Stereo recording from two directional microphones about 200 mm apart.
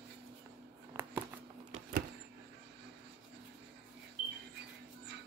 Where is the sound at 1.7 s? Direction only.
45° right (ahead or behind).